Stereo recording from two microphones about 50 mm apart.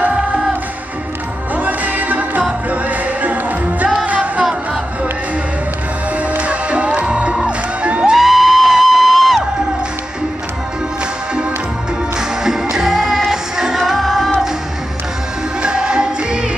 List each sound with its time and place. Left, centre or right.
1.5 s music: right
6.3 s music: right
8.1 s music: centre
12.7 s music: centre
15.6 s music: centre